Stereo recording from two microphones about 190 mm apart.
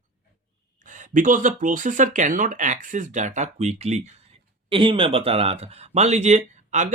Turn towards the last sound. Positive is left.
turn(degrees=-40)  # may be behind; listen again after turning